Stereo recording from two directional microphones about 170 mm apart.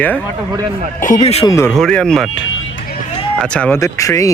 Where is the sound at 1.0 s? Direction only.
45° left (ahead or behind).